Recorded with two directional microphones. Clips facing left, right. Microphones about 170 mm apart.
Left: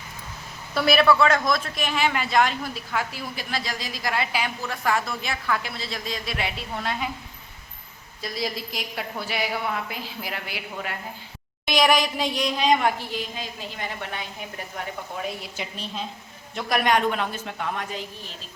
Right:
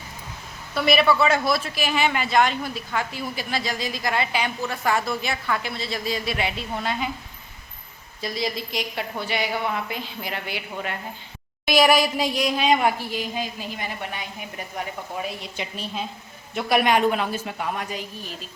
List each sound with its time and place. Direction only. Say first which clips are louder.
0.7 s a man's voice: left 1 dB; centre (ahead or behind)
8.2 s a man's voice: right 2 dB; centre (ahead or behind)
15.7 s a woman's voice: right 2 dB; 5° right (ahead or behind)